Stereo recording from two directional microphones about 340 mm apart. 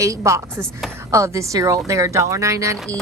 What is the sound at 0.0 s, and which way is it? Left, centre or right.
A woman's voice, centre.